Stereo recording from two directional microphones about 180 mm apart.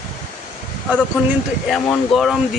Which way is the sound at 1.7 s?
Centre (ahead or behind).